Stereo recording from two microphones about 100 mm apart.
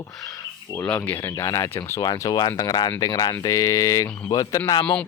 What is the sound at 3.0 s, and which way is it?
Mantra, 40° left (ahead or behind).